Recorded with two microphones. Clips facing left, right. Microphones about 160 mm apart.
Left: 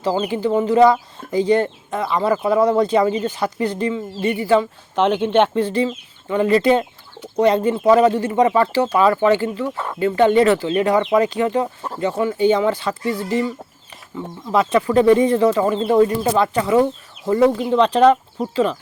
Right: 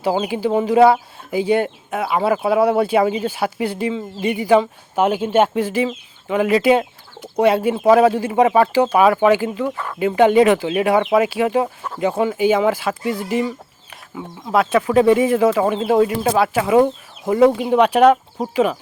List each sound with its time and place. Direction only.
0.0 s speech: 10° right (ahead or behind)
9.7 s speech: 20° left (ahead or behind)
10.0 s speech: 15° right (ahead or behind)
14.5 s speech: 5° right (ahead or behind)